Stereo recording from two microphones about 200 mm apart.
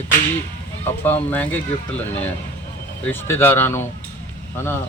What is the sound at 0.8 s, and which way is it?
Speech, 10° left (ahead or behind).